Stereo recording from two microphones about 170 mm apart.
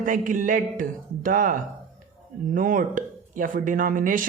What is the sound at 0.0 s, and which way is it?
A woman's voice, 50° right (ahead or behind).